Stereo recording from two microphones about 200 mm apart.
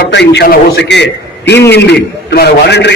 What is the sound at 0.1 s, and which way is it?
A man's voice, 60° left (ahead or behind).